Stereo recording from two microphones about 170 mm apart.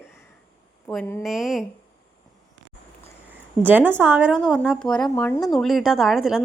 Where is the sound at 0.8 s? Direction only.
10° left (ahead or behind).